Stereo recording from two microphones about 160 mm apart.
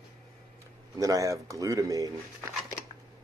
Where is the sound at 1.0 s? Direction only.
20° right (ahead or behind).